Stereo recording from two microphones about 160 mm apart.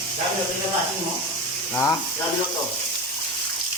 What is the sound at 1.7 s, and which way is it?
Speech, 15° left (ahead or behind).